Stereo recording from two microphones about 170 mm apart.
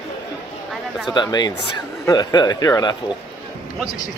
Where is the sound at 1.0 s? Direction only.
25° left (ahead or behind).